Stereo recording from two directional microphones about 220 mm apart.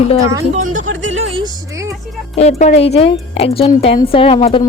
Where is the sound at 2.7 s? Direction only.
30° left (ahead or behind).